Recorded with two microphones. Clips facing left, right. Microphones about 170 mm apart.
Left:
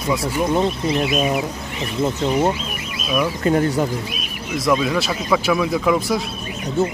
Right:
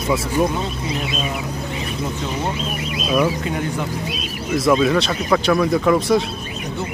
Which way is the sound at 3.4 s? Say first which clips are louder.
Left 6 dB; 45° left (ahead or behind).